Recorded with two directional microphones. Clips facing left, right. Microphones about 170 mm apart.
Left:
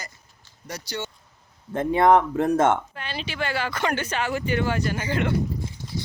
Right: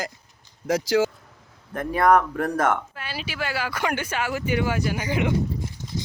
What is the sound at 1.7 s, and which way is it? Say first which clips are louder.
Speech: left 1 dB; 25° left (ahead or behind).